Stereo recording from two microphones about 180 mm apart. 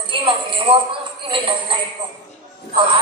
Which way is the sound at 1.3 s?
30° right (ahead or behind).